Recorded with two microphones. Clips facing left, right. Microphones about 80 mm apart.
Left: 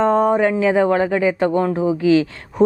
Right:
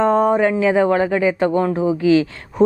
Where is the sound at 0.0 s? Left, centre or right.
Right.